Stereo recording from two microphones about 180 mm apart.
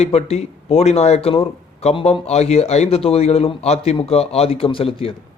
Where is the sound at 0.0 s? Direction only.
35° left (ahead or behind).